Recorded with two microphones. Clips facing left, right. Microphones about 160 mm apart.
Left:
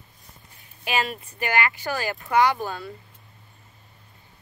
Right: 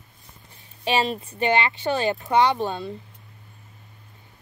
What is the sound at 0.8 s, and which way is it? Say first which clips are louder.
A woman's voice: right 4 dB; 25° right (ahead or behind).